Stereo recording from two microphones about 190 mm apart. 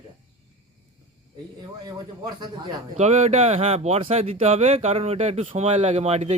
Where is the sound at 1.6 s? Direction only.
20° right (ahead or behind).